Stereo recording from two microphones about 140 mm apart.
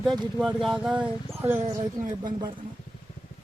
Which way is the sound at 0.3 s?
5° right (ahead or behind).